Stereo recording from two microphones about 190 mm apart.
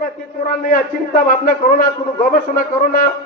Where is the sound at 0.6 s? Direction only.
50° left (ahead or behind).